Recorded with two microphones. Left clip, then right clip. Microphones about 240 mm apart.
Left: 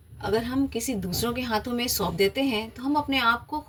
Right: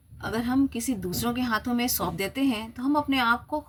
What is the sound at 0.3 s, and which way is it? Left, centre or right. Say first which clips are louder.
Speech: even; centre.